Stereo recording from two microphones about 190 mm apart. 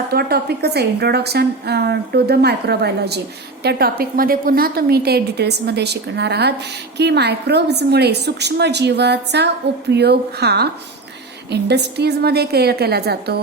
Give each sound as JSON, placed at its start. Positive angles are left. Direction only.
{"t": 0.1, "sound": "a woman's voice", "side_deg": -55}